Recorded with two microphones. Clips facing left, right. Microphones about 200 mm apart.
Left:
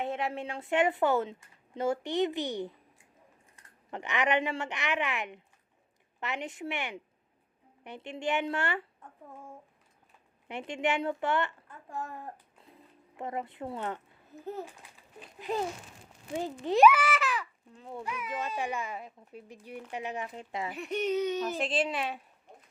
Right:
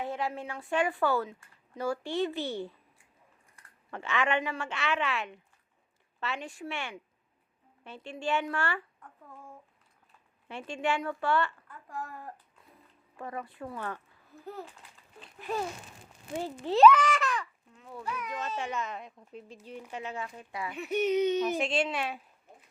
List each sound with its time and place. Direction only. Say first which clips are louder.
0.0 s a woman's voice: left 1 dB; 25° left (ahead or behind)
10.5 s a woman's voice: left 1 dB; 20° left (ahead or behind); by 17.5 s 5° left (ahead or behind)
17.7 s speech: left 3 dB; 30° left (ahead or behind)
18.0 s a woman's voice: even; 15° left (ahead or behind)
20.7 s a woman's voice: right 3 dB; 5° right (ahead or behind)
21.2 s a sound: right 4 dB; 20° right (ahead or behind)
21.6 s a woman's voice: even; centre (ahead or behind)